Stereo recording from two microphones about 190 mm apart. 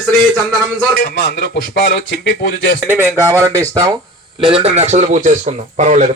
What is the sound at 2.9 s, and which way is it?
Speech, 10° right (ahead or behind).